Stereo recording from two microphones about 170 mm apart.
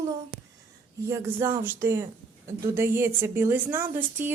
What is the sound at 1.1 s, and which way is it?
A woman's voice, 15° right (ahead or behind).